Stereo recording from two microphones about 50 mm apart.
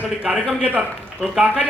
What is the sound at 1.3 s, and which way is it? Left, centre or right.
Speech, centre.